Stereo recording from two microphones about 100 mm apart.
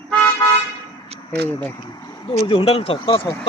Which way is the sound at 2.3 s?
65° left (ahead or behind).